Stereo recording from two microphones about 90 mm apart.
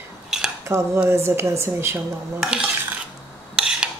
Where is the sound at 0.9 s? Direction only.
25° right (ahead or behind).